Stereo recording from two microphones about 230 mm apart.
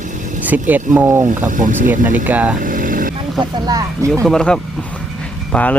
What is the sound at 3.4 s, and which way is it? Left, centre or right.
Speech, centre.